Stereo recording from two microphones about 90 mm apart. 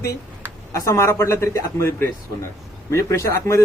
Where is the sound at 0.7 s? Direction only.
30° left (ahead or behind).